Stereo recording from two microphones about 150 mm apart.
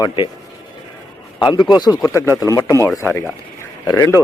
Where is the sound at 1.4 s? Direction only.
25° left (ahead or behind).